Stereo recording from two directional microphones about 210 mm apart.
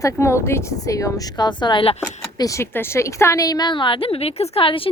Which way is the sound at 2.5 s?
10° left (ahead or behind).